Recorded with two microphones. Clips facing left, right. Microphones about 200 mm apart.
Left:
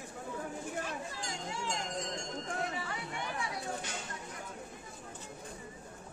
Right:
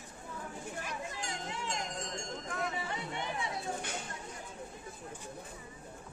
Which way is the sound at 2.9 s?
25° right (ahead or behind).